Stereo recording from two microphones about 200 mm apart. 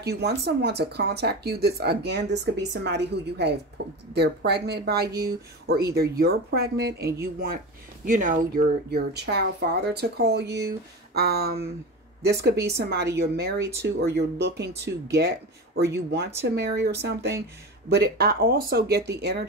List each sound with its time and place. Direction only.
0.0 s speech: 55° right (ahead or behind)
8.9 s speech: 55° right (ahead or behind)
13.6 s speech: 15° right (ahead or behind)
13.8 s speech: 55° right (ahead or behind)